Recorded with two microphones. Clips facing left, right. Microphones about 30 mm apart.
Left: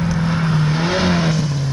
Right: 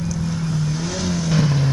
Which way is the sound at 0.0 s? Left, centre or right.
Left.